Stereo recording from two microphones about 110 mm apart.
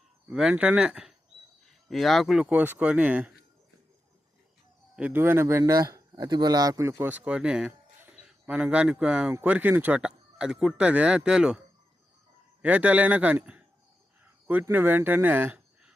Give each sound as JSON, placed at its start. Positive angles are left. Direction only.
{"t": 0.3, "sound": "speech", "side_deg": -10}
{"t": 2.6, "sound": "speech", "side_deg": -15}
{"t": 4.9, "sound": "speech", "side_deg": -10}
{"t": 5.2, "sound": "speech", "side_deg": -20}
{"t": 12.6, "sound": "speech", "side_deg": -15}
{"t": 14.6, "sound": "speech", "side_deg": -20}